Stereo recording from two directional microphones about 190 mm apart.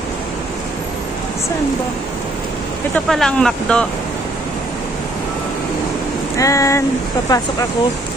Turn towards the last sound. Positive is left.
turn(degrees=20)  # may be behind; listen again after turning